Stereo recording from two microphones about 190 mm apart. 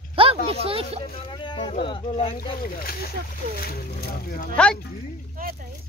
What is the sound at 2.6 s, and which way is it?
Speech, 50° left (ahead or behind).